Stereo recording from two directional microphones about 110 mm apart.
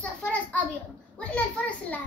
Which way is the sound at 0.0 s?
10° left (ahead or behind).